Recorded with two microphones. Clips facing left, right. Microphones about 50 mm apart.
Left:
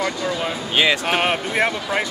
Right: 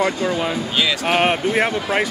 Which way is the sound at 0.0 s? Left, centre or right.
Right.